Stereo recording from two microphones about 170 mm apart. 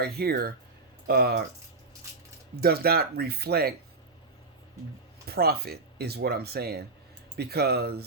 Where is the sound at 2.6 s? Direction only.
65° right (ahead or behind).